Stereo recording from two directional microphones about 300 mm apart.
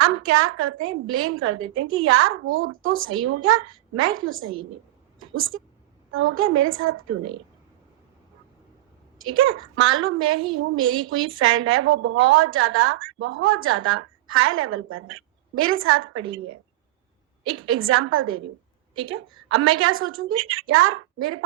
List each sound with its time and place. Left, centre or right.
0.0 s a woman's voice: right
9.1 s a woman's voice: right
17.5 s a woman's voice: right
19.5 s a woman's voice: right